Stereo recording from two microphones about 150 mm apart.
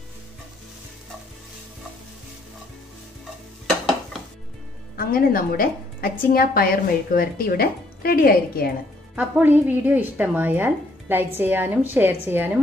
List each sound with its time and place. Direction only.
3.6 s dishes: centre (ahead or behind)
4.9 s a woman's voice: 80° left
9.1 s speech: 10° right (ahead or behind)